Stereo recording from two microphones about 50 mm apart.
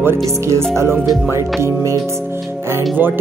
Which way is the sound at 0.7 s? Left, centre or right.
Right.